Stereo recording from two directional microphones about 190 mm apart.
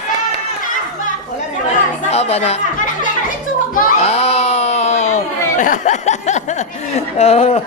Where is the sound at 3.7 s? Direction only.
35° left (ahead or behind).